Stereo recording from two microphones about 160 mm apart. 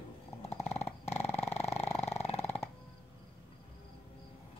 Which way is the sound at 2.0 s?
40° left (ahead or behind).